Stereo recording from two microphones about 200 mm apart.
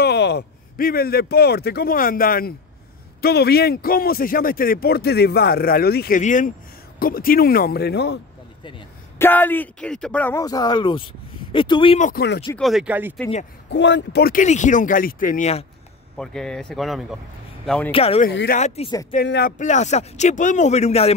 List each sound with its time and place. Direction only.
0.0 s a man's voice: 55° left (ahead or behind)
9.2 s speech: 10° left (ahead or behind)
12.0 s a man's voice: 45° left (ahead or behind)
12.5 s speech: centre (ahead or behind)
13.7 s speech: 65° left (ahead or behind); by 15.6 s 35° left (ahead or behind)
16.2 s speech: 5° left (ahead or behind)
17.9 s speech: 30° left (ahead or behind)
18.3 s speech: 55° left (ahead or behind)
18.9 s speech: 20° left (ahead or behind)
19.1 s a man's voice: 50° left (ahead or behind)
19.6 s speech: 35° left (ahead or behind)